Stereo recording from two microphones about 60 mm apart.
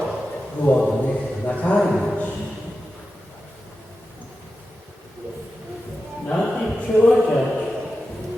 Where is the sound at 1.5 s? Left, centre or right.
Left.